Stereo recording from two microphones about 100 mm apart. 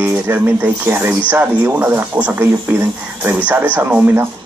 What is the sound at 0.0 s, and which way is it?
Speech, 20° right (ahead or behind).